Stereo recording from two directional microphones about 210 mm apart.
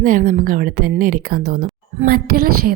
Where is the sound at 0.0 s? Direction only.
40° right (ahead or behind).